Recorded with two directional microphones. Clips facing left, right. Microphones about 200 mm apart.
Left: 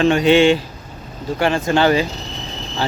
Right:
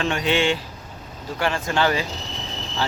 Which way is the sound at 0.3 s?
90° left.